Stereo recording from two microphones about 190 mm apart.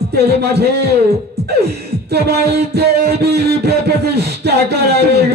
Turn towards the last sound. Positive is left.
turn(degrees=-60)  # may be behind; listen again after turning